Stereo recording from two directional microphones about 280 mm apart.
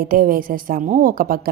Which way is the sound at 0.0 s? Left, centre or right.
Right.